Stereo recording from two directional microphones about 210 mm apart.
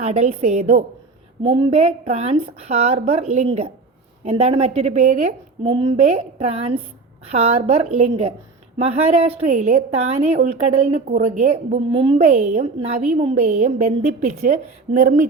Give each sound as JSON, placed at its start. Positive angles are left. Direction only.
{"t": 0.0, "sound": "a woman's voice", "side_deg": -35}
{"t": 5.6, "sound": "a woman's voice", "side_deg": -25}